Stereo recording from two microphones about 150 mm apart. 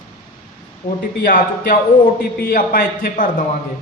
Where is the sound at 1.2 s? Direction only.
70° left (ahead or behind).